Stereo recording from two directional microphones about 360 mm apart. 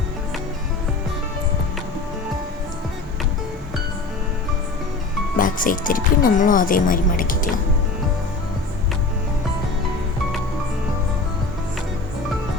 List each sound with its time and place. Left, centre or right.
5.4 s speech: left